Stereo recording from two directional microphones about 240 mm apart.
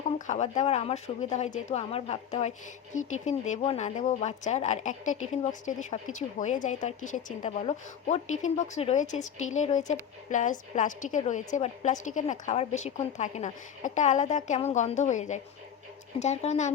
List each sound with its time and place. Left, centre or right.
0.3 s a woman's voice: left